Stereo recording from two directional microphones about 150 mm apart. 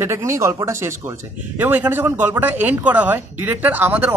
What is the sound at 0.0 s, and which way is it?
Speech, 20° right (ahead or behind).